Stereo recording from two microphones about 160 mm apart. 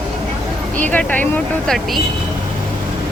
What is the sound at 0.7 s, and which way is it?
Speech, 10° left (ahead or behind).